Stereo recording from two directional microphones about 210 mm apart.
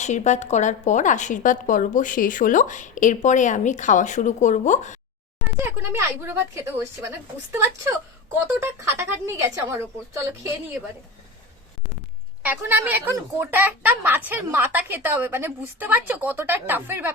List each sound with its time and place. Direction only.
0.0 s a woman's voice: 35° left (ahead or behind)
5.5 s speech: 10° right (ahead or behind)
12.4 s speech: 10° right (ahead or behind)